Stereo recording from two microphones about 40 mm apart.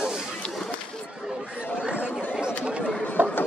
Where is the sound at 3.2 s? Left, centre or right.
Right.